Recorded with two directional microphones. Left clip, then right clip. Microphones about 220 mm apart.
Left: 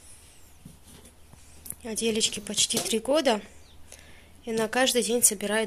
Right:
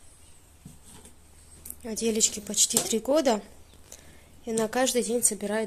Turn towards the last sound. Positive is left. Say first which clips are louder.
# left 2 dB
turn(degrees=0)  # may be behind; listen again after turning